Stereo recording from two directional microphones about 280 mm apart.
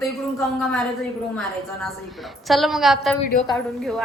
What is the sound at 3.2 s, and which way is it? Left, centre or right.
Speech, left.